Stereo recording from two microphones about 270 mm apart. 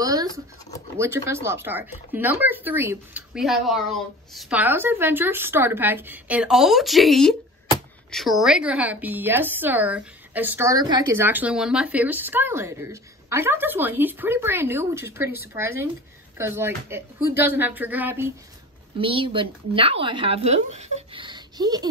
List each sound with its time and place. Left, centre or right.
0.0 s a sound: centre
0.9 s a woman's voice: centre
18.9 s a woman's voice: centre